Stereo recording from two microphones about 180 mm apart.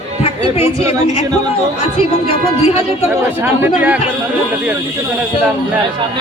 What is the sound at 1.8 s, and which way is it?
Speech, 35° left (ahead or behind).